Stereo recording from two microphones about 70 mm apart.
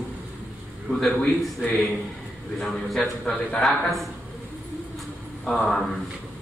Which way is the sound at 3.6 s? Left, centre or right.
Centre.